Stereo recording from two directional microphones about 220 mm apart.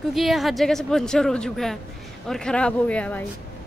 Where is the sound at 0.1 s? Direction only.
Centre (ahead or behind).